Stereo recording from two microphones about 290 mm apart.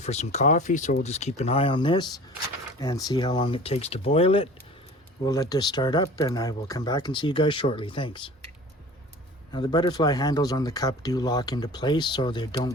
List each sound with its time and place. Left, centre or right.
0.0 s speech: left
9.5 s speech: centre